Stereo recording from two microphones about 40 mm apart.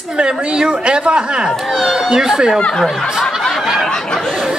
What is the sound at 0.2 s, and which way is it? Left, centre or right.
Speech, right.